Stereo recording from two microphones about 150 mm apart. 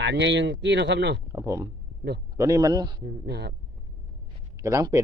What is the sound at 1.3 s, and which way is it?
Speech, 20° right (ahead or behind).